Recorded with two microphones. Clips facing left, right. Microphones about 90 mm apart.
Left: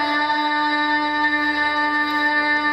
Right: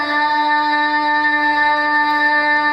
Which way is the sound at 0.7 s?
25° right (ahead or behind).